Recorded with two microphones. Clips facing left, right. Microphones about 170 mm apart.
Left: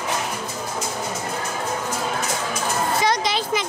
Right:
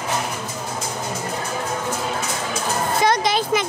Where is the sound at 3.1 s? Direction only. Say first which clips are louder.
Right 3 dB; 50° right (ahead or behind).